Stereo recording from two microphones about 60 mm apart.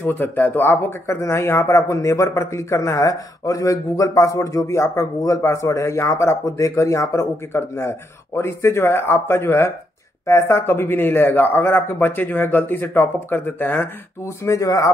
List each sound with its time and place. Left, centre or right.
0.0 s speech: left
14.2 s speech: left